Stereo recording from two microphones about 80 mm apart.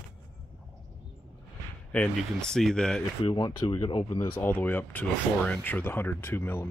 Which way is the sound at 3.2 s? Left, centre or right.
Left.